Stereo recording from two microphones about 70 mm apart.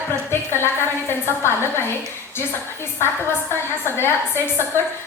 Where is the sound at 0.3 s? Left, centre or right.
Left.